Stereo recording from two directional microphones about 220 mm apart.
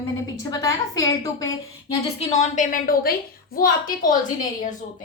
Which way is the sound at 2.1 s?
30° left (ahead or behind).